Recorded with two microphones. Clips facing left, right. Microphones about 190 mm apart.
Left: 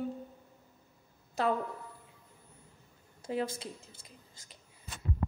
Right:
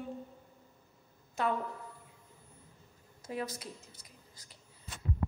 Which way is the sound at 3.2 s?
30° left (ahead or behind).